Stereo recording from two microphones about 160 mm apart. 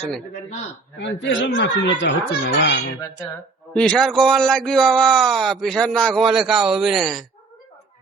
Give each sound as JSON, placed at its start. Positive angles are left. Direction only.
{"t": 1.0, "sound": "speech", "side_deg": 90}
{"t": 3.8, "sound": "a man's voice", "side_deg": 5}